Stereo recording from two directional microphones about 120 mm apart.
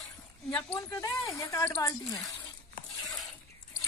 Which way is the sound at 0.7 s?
30° left (ahead or behind).